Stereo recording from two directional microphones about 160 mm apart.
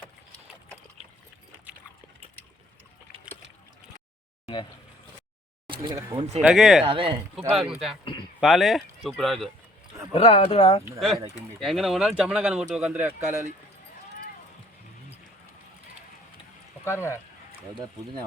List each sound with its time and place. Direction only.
5.6 s a sound: 30° right (ahead or behind)
6.1 s speech: 40° right (ahead or behind)
6.5 s speech: centre (ahead or behind)
6.8 s speech: 35° right (ahead or behind)
7.5 s speech: centre (ahead or behind)
10.1 s speech: 35° left (ahead or behind)
11.6 s speech: centre (ahead or behind)
16.8 s speech: 15° left (ahead or behind)